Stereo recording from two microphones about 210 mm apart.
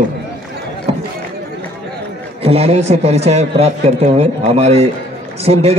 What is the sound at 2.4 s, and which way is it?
Speech, 30° right (ahead or behind).